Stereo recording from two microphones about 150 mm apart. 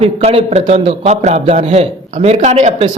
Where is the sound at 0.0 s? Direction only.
40° right (ahead or behind).